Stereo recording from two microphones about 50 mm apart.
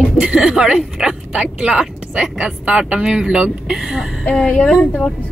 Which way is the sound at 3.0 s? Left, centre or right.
Centre.